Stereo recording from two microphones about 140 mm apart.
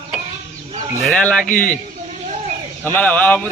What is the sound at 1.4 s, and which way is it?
Speech, 75° left (ahead or behind).